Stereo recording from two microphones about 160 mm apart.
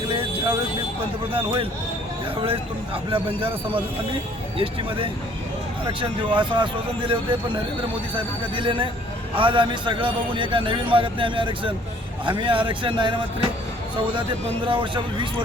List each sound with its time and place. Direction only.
0.1 s vehicle: 35° right (ahead or behind)
1.3 s a man's voice: 35° right (ahead or behind)
4.5 s a man's voice: 35° right (ahead or behind)
14.7 s a man's voice: 30° right (ahead or behind)